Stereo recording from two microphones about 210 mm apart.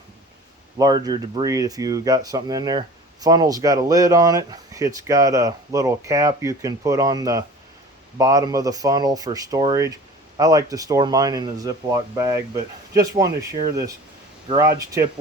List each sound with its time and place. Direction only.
0.8 s speech: 20° right (ahead or behind)